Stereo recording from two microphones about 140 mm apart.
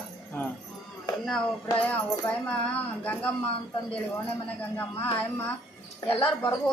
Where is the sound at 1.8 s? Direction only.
10° left (ahead or behind).